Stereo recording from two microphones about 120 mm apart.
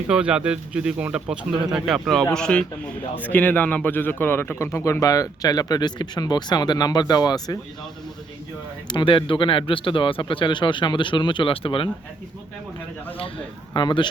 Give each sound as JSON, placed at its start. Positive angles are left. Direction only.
{"t": 0.1, "sound": "a man's voice", "side_deg": -10}
{"t": 8.9, "sound": "speech", "side_deg": 40}
{"t": 13.7, "sound": "speech", "side_deg": 40}